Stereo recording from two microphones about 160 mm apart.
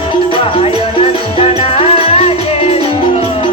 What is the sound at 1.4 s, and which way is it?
Music, 35° left (ahead or behind).